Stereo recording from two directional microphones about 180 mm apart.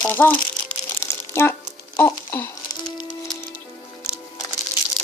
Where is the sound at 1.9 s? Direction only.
10° left (ahead or behind).